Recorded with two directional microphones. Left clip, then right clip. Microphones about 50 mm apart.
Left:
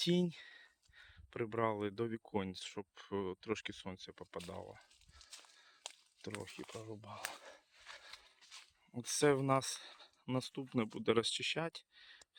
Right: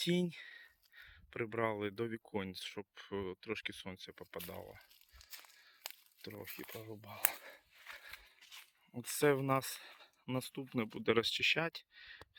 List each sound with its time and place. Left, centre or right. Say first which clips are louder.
0.0 s speech: left 1 dB; left
3.2 s speech: left 1 dB; left
3.8 s speech: even; left
4.4 s speech: even; centre
4.6 s speech: even; centre
6.3 s speech: left 3 dB; centre
7.1 s speech: even; centre
8.9 s speech: even; centre
10.9 s speech: right 2 dB; left
11.9 s a sound: right 5 dB; centre